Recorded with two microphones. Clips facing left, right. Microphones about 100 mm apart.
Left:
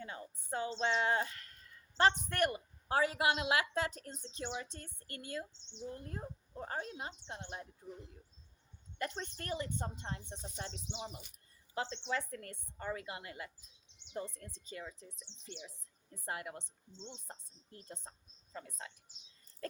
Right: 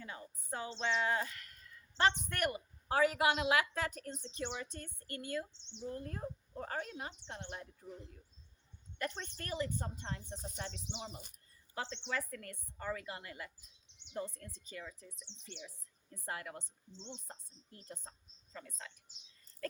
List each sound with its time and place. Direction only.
0.0 s a sound: 30° left (ahead or behind)
0.7 s speech: 30° left (ahead or behind)
9.0 s speech: 30° left (ahead or behind)
11.8 s speech: 30° left (ahead or behind)
17.8 s speech: 25° left (ahead or behind)